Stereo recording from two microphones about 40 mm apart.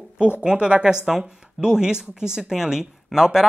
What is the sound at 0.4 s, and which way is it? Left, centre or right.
Speech, right.